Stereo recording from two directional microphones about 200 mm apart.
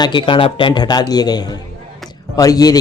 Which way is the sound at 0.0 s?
25° left (ahead or behind).